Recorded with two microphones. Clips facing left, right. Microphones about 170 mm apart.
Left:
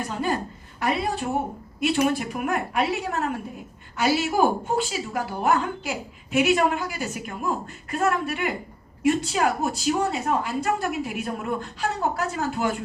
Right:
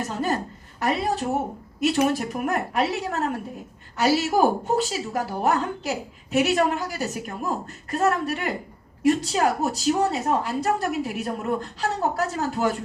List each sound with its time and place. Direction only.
0.8 s a woman's voice: 40° right (ahead or behind)